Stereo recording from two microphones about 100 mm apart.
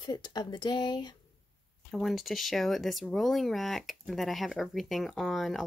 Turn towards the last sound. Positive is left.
turn(degrees=0)  # may be behind; listen again after turning